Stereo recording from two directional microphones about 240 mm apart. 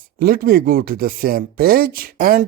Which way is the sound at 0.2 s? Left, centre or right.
Right.